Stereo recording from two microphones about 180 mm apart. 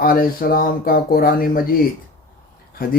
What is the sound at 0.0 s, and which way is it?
Mantra, 55° left (ahead or behind).